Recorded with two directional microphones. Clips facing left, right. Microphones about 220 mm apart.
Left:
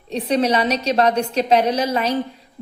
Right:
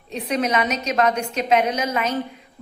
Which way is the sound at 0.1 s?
30° left (ahead or behind).